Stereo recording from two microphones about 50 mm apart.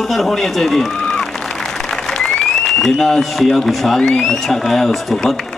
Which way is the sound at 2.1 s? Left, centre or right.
Centre.